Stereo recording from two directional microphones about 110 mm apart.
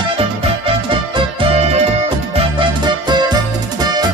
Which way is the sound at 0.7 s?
55° right (ahead or behind).